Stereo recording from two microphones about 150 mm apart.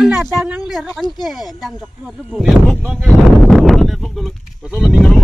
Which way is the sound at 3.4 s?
Centre (ahead or behind).